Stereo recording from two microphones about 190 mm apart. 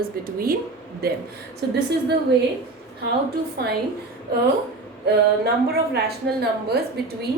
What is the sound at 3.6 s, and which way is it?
Speech, 55° right (ahead or behind).